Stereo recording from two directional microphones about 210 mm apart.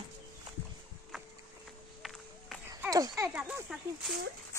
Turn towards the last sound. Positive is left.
turn(degrees=-5)  # may be behind; listen again after turning